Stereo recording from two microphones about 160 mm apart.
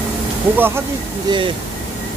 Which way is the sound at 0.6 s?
15° right (ahead or behind).